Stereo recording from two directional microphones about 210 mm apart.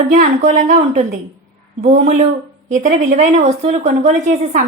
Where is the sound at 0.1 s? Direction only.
35° right (ahead or behind).